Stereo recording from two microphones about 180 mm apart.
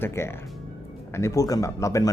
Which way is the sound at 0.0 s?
15° left (ahead or behind).